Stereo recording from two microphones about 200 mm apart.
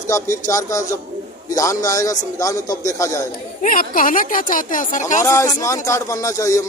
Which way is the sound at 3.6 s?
45° left (ahead or behind).